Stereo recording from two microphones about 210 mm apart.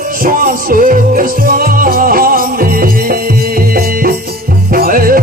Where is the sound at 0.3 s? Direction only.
40° right (ahead or behind).